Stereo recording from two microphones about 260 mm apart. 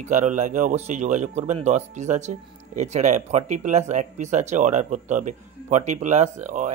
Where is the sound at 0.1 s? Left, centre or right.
Right.